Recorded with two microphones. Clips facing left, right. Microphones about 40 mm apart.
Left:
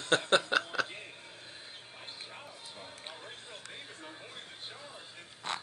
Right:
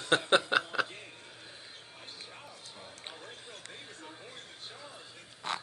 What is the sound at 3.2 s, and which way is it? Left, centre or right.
Music, centre.